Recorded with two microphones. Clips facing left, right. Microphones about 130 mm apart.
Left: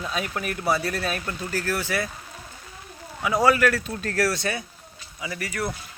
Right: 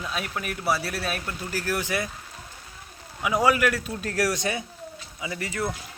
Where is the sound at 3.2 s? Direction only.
10° right (ahead or behind).